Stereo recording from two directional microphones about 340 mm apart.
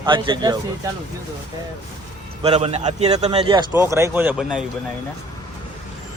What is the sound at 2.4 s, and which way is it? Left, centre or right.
A man's voice, centre.